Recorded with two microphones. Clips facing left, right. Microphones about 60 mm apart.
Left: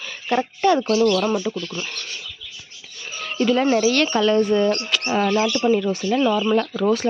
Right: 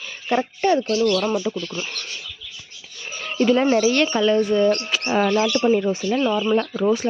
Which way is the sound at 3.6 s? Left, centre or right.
Centre.